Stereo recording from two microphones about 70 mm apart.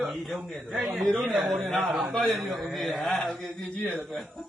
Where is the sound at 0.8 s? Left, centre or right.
Centre.